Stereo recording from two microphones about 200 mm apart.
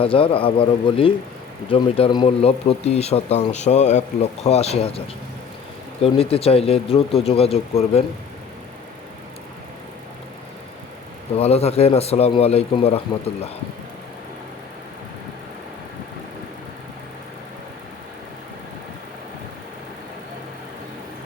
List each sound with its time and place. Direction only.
0.0 s speech: 25° left (ahead or behind)
11.3 s speech: 30° left (ahead or behind)